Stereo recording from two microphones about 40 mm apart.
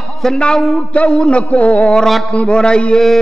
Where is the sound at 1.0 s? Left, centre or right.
Left.